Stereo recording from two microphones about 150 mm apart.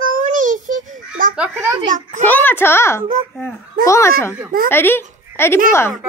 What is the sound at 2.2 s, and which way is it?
Speech, 15° left (ahead or behind).